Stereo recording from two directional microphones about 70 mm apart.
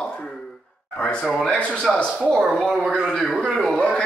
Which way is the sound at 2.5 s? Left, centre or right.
Centre.